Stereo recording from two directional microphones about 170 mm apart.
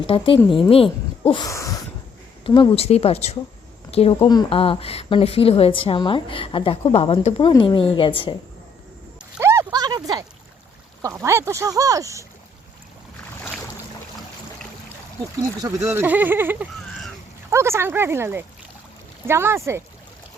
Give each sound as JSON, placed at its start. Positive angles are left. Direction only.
{"t": 0.1, "sound": "a woman's voice", "side_deg": 30}
{"t": 9.4, "sound": "a sound", "side_deg": -15}
{"t": 11.0, "sound": "speech", "side_deg": -15}
{"t": 15.6, "sound": "speech", "side_deg": -15}